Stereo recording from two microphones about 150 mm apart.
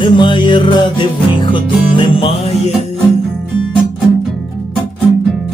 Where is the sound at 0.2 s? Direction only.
30° left (ahead or behind).